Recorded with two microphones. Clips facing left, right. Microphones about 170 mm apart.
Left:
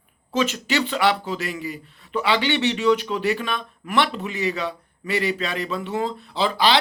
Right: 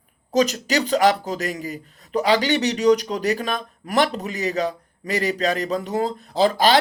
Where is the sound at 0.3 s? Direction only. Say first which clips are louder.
Right 3 dB; 40° right (ahead or behind).